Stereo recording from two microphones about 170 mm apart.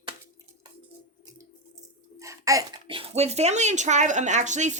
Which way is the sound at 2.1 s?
20° right (ahead or behind).